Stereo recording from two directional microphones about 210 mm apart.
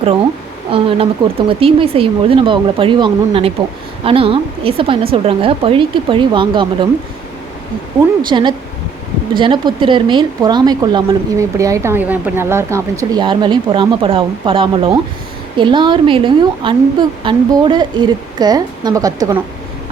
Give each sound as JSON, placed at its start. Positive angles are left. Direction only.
{"t": 0.7, "sound": "speech", "side_deg": -25}
{"t": 8.3, "sound": "speech", "side_deg": -20}